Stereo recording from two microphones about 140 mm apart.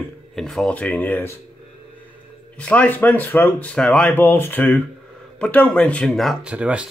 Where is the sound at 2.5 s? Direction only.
10° left (ahead or behind); by 6.9 s 10° right (ahead or behind).